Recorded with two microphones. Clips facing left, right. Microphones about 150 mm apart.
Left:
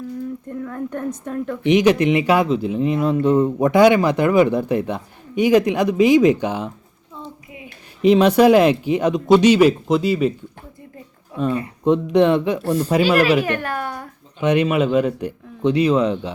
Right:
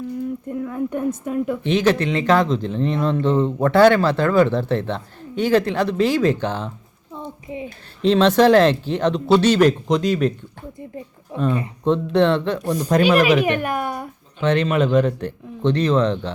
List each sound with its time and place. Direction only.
0.4 s a woman's voice: 5° right (ahead or behind)
1.6 s a man's voice: 15° left (ahead or behind)
8.0 s a man's voice: 10° left (ahead or behind)
11.3 s speech: 25° right (ahead or behind)
11.9 s a man's voice: 15° left (ahead or behind)
12.6 s a woman's voice: 15° right (ahead or behind)
12.9 s a man's voice: 10° left (ahead or behind)
13.4 s speech: 15° right (ahead or behind)
14.4 s a man's voice: 10° left (ahead or behind)